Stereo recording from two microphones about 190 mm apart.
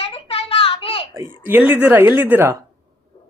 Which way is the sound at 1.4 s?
10° right (ahead or behind).